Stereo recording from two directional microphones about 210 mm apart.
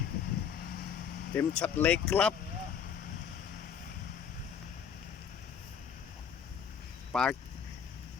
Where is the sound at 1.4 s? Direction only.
5° left (ahead or behind).